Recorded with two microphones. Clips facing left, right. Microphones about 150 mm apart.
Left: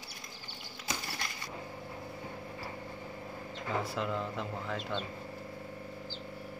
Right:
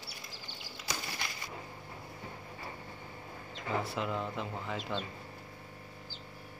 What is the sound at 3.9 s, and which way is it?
Speech, centre (ahead or behind).